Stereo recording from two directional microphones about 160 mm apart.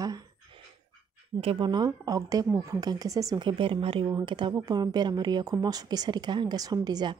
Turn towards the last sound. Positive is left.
turn(degrees=-25)  # may be behind; listen again after turning